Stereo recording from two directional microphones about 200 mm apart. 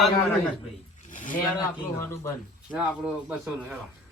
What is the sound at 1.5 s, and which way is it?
Speech, 15° left (ahead or behind).